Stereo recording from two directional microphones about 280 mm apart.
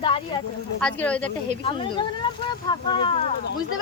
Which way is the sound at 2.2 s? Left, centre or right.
Centre.